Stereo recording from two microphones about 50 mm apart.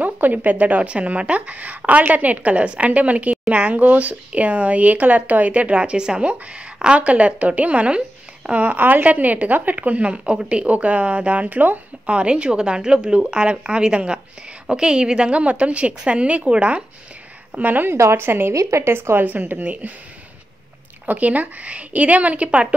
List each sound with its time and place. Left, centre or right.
0.0 s speech: right
12.2 s speech: right
17.6 s speech: right
17.9 s speech: right
18.5 s speech: right
19.2 s speech: right
21.0 s speech: right